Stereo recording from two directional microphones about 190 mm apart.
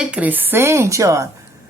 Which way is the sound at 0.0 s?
5° right (ahead or behind).